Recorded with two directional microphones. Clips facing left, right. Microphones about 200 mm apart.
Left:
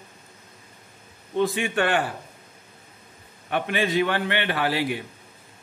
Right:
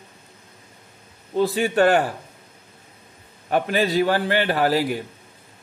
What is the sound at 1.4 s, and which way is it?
Speech, 35° right (ahead or behind).